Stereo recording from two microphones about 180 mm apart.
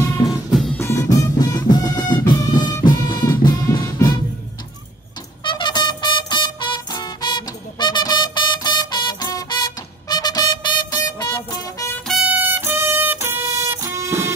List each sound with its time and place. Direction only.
0.7 s music: 15° left (ahead or behind)
5.4 s music: 25° left (ahead or behind)
12.1 s music: 5° right (ahead or behind)